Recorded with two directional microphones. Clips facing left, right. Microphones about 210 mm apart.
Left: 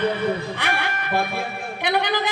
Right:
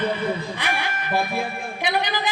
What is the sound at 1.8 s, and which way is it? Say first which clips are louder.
Speech: left 3 dB; 60° left (ahead or behind).